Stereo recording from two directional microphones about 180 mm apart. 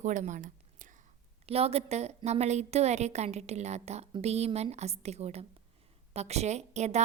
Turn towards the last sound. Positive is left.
turn(degrees=-40)  # may be behind; listen again after turning